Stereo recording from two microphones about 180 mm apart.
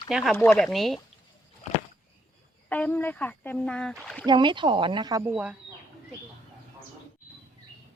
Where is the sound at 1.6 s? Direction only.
40° left (ahead or behind).